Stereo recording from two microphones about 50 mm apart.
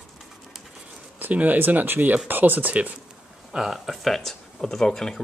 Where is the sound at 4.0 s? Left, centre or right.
Centre.